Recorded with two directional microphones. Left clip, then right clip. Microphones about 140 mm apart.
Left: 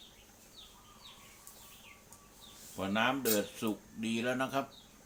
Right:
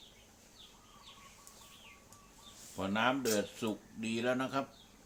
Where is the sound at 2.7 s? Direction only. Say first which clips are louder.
Left 1 dB; 30° right (ahead or behind).